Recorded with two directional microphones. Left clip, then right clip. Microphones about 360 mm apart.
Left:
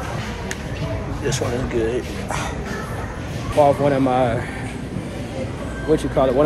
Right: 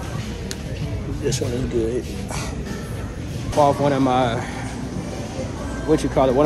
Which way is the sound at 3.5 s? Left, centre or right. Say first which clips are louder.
Left 2 dB; centre.